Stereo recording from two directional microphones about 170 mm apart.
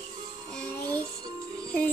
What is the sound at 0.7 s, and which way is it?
Music, 25° right (ahead or behind).